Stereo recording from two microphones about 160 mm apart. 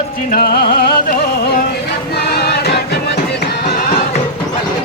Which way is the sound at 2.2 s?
85° left.